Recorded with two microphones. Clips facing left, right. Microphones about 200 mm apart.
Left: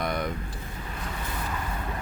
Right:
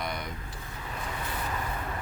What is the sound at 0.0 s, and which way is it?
Vehicle, 55° left (ahead or behind).